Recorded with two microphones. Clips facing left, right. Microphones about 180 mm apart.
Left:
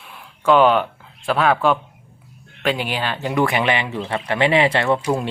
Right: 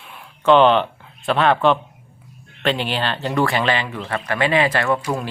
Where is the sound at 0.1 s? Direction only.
5° left (ahead or behind).